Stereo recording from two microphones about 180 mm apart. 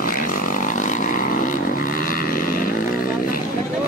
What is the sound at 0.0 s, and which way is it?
Vehicle, 50° left (ahead or behind).